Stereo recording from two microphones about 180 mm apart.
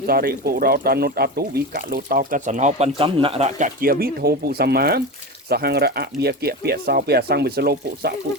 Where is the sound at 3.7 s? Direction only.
55° right (ahead or behind).